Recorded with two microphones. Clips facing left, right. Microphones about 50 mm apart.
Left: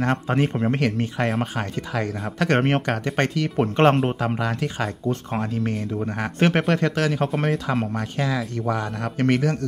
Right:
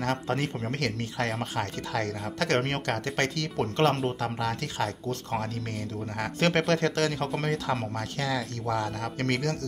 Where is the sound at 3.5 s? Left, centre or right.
Left.